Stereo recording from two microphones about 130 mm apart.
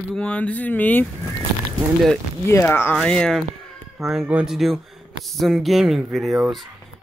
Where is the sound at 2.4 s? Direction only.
20° left (ahead or behind); by 6.7 s centre (ahead or behind).